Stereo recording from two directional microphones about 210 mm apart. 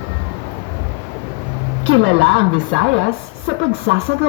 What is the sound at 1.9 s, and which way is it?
A woman's voice, 65° right (ahead or behind).